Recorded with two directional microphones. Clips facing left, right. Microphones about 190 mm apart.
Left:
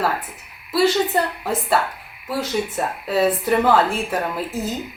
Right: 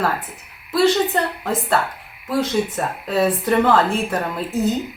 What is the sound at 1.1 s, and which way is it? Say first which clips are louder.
Speech: left 1 dB; 10° left (ahead or behind).